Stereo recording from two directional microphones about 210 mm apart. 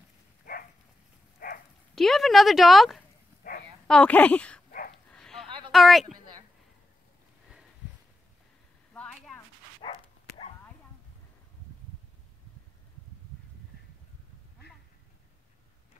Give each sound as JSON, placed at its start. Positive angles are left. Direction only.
{"t": 1.4, "sound": "dog", "side_deg": 45}
{"t": 2.0, "sound": "speech", "side_deg": 0}
{"t": 5.1, "sound": "a sound", "side_deg": 5}
{"t": 5.7, "sound": "speech", "side_deg": 0}
{"t": 8.9, "sound": "a sound", "side_deg": 5}
{"t": 9.8, "sound": "dog", "side_deg": 25}